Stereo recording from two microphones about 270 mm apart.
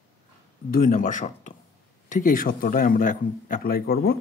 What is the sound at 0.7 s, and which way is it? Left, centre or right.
Speech, left.